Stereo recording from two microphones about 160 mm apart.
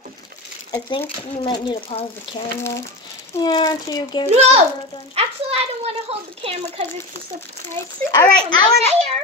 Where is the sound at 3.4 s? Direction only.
25° left (ahead or behind).